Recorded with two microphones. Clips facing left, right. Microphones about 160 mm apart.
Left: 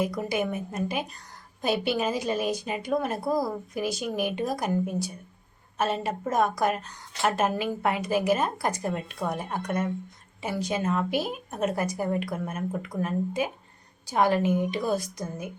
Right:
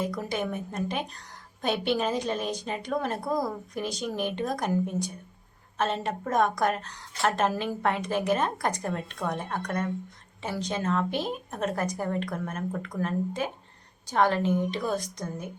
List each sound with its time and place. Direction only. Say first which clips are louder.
0.2 s a woman's voice: left 2 dB; 10° left (ahead or behind)